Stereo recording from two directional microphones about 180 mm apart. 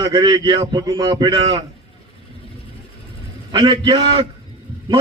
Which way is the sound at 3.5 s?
25° right (ahead or behind).